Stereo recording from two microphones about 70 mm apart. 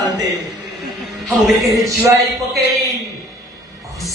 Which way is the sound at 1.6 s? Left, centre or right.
Right.